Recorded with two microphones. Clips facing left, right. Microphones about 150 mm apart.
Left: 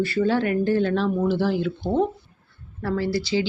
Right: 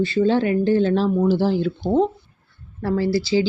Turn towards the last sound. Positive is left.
turn(degrees=-30)  # may be behind; listen again after turning